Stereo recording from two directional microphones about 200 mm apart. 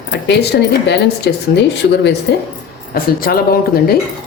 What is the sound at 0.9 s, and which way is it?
A woman's voice, 60° left (ahead or behind).